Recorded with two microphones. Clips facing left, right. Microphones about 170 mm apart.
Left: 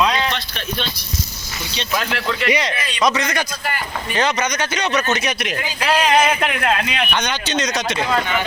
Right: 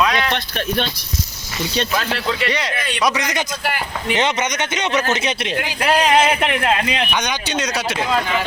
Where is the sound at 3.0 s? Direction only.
15° right (ahead or behind).